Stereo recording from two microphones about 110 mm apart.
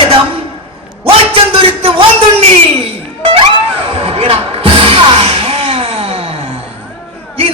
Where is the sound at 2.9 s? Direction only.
60° right (ahead or behind).